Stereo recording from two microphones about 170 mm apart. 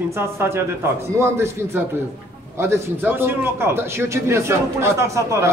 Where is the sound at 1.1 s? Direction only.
15° right (ahead or behind).